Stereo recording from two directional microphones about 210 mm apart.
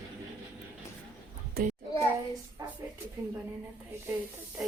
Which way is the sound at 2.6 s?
15° right (ahead or behind).